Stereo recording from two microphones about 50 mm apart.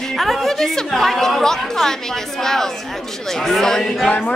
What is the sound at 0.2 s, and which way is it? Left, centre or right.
A woman's voice, centre.